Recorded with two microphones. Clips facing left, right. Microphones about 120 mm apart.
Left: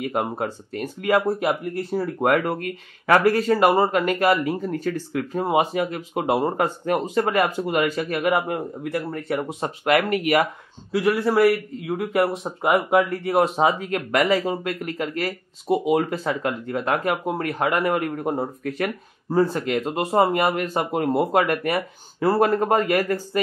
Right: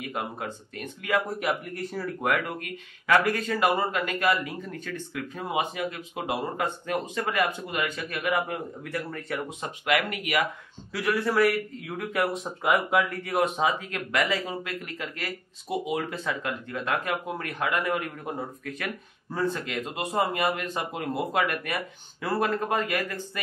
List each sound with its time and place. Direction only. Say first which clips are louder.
0.0 s speech: left 8 dB; 40° left (ahead or behind)